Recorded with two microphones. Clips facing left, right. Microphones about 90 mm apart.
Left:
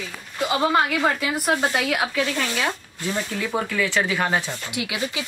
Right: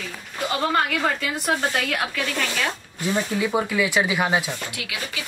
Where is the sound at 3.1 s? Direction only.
10° right (ahead or behind).